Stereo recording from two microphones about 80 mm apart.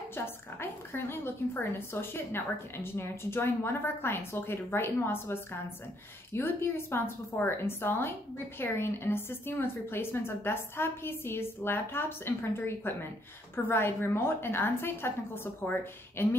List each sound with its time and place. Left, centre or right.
0.1 s a woman's voice: left